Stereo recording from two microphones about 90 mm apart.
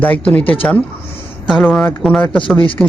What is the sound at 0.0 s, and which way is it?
Speech, 15° left (ahead or behind).